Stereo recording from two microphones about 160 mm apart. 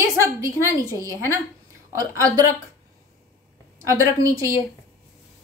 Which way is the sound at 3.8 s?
20° right (ahead or behind).